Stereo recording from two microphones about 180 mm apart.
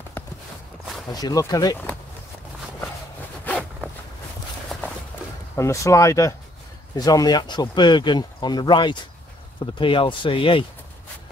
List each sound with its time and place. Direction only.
1.1 s speech: 20° left (ahead or behind)
3.4 s zipper: 5° left (ahead or behind)
5.6 s speech: 15° left (ahead or behind)